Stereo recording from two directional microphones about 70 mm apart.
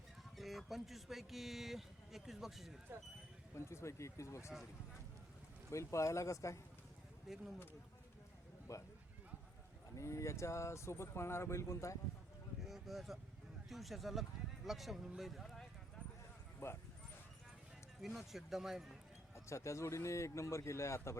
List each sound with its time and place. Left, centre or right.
0.3 s a man's voice: centre
3.5 s speech: left
5.7 s speech: left
7.3 s a man's voice: centre
8.7 s speech: left
9.9 s speech: left
12.6 s a sound: centre
13.7 s a man's voice: centre
16.6 s speech: left
18.0 s a man's voice: centre
19.5 s speech: left